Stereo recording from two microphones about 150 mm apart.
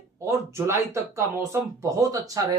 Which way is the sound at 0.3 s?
20° right (ahead or behind).